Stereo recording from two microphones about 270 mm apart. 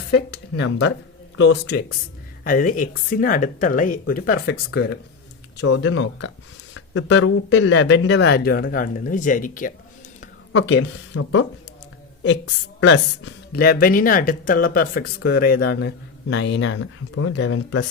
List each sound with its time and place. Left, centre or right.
0.1 s speech: left
10.5 s speech: left
12.8 s speech: left